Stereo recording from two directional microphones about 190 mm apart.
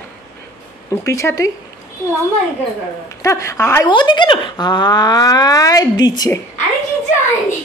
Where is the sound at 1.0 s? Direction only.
15° left (ahead or behind).